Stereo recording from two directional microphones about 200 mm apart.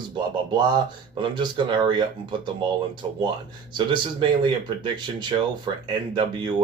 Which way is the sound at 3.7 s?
25° right (ahead or behind).